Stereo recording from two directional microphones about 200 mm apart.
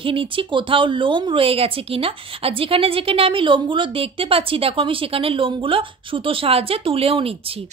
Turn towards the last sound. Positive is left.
turn(degrees=-30)  # may be behind; listen again after turning